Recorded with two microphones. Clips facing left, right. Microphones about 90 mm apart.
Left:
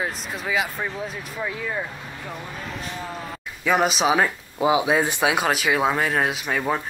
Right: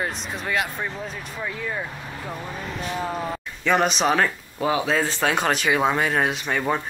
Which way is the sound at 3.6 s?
5° left (ahead or behind).